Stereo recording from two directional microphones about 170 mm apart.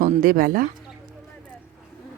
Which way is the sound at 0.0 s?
55° right (ahead or behind).